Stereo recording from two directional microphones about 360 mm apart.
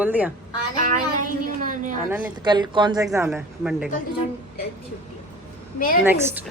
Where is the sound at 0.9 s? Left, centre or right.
Right.